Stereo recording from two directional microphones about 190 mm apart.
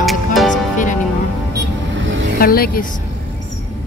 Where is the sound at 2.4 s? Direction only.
50° left (ahead or behind).